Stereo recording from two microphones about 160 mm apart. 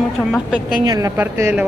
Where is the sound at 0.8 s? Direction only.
25° right (ahead or behind).